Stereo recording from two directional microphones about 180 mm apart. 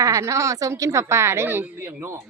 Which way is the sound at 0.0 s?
15° right (ahead or behind).